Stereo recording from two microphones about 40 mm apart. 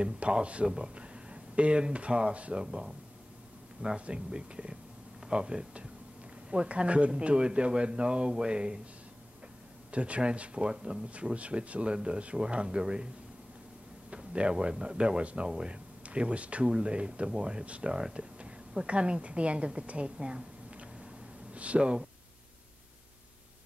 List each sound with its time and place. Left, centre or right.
0.0 s a man's voice: right
2.6 s a man's voice: centre
9.8 s a man's voice: right
11.3 s a man's voice: right
14.1 s a man's voice: right